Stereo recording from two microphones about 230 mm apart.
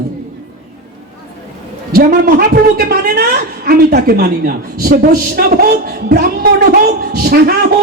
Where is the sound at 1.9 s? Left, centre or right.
Right.